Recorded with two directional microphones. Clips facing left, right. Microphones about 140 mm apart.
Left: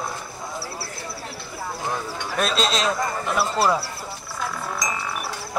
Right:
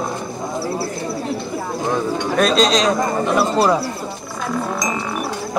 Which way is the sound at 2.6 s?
5° left (ahead or behind).